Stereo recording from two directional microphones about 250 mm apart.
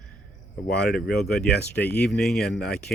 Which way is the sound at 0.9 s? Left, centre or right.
Centre.